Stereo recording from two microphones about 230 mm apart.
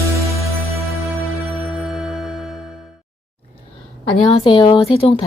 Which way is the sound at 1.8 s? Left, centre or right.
Centre.